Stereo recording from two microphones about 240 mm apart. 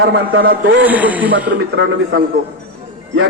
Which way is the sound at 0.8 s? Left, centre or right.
Centre.